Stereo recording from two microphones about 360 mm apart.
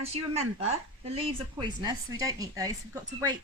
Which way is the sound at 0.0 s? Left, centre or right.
Centre.